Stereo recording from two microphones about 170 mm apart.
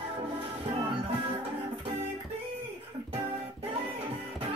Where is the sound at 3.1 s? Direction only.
35° right (ahead or behind).